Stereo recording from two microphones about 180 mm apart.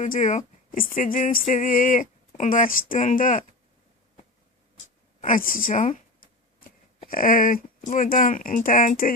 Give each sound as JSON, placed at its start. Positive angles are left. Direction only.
{"t": 0.0, "sound": "speech", "side_deg": 45}
{"t": 5.2, "sound": "a woman's voice", "side_deg": 50}